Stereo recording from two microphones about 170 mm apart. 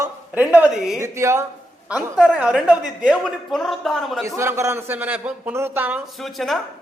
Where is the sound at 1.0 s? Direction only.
15° right (ahead or behind); by 4.2 s centre (ahead or behind).